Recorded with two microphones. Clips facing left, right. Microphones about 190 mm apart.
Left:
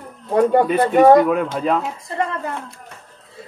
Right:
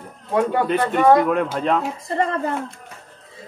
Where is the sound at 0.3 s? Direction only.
40° left (ahead or behind).